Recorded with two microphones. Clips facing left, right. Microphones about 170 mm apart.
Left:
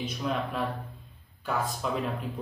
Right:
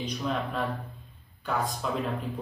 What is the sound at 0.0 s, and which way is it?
A man's voice, centre (ahead or behind).